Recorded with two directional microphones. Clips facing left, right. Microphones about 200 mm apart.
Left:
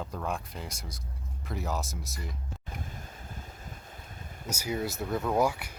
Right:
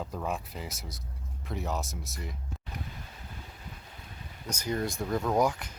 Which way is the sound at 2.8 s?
45° left (ahead or behind).